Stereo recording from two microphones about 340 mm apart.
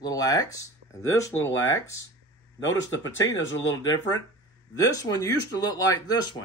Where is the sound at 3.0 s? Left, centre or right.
Centre.